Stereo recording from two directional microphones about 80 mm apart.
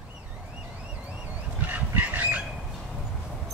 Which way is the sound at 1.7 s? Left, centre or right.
Centre.